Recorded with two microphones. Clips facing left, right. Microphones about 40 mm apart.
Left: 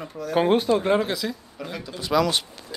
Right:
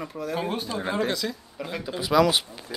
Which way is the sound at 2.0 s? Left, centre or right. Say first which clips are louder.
Right 1 dB; centre.